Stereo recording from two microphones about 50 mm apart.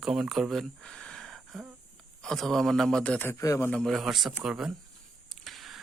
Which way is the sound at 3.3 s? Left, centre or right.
Left.